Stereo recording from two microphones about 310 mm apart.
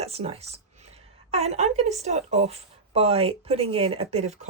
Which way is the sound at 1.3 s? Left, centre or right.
Right.